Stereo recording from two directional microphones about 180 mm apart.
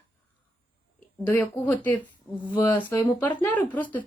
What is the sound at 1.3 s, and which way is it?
Speech, 10° left (ahead or behind).